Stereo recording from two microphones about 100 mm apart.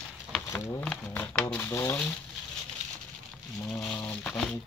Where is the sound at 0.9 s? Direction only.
10° left (ahead or behind).